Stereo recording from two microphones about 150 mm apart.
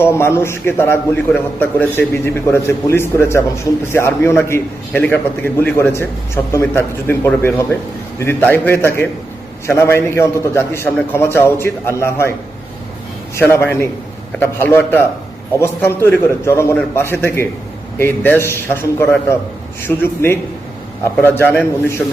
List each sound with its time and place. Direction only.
0.0 s a man's voice: 15° left (ahead or behind)
13.3 s a man's voice: 15° left (ahead or behind)